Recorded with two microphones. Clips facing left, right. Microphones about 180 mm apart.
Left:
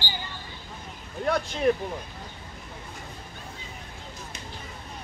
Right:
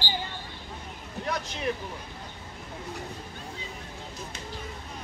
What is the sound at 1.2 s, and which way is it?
Vehicle, 45° left (ahead or behind).